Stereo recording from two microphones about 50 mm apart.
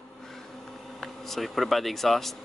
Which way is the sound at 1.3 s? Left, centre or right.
Centre.